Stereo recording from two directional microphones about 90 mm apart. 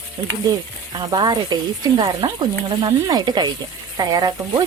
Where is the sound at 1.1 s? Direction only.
50° right (ahead or behind).